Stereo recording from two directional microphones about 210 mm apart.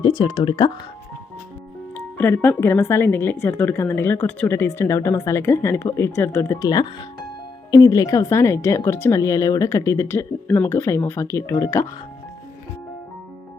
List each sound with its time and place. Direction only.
0.0 s speech: 25° left (ahead or behind)
2.1 s speech: 10° left (ahead or behind)